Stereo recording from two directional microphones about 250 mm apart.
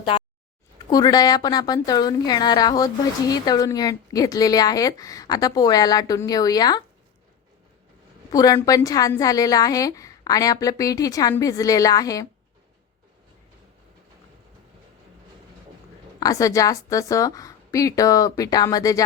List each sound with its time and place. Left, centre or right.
0.0 s a sound: centre
0.9 s a woman's voice: centre
8.3 s a woman's voice: centre
16.2 s a woman's voice: centre